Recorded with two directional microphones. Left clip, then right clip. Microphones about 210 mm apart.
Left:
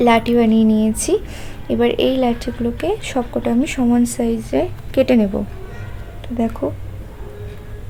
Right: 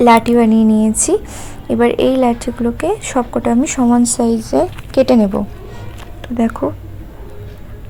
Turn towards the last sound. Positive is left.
turn(degrees=-20)  # may be behind; listen again after turning